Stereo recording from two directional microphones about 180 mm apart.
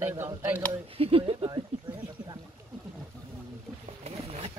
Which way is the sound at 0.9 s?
30° right (ahead or behind).